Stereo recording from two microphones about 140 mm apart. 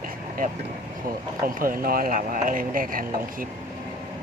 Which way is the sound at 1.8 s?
90° right.